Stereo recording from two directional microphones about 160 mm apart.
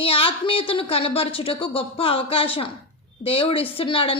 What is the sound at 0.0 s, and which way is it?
Speech, 35° left (ahead or behind).